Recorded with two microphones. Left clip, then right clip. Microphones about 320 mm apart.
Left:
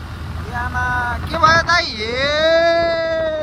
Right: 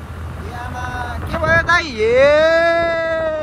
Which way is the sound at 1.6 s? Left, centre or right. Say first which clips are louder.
Right 2 dB; centre.